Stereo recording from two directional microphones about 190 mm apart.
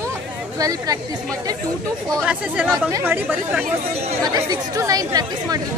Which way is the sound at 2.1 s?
5° right (ahead or behind).